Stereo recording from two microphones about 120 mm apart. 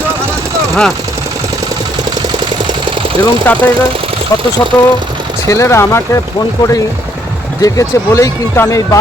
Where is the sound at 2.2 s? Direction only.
35° right (ahead or behind).